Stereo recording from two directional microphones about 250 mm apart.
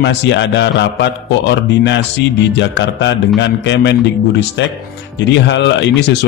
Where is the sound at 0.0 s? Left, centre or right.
Left.